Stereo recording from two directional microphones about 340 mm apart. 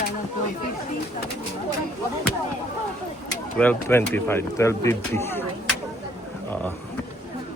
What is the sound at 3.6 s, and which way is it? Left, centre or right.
Speech, centre.